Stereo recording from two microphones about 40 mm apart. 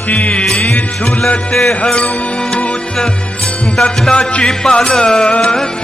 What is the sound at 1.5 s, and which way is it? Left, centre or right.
Music, centre.